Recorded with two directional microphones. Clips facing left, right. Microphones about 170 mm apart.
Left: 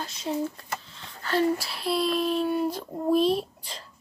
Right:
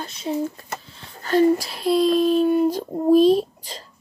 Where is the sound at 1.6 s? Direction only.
40° right (ahead or behind).